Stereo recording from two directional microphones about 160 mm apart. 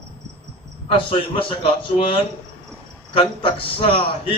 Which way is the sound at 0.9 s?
35° left (ahead or behind).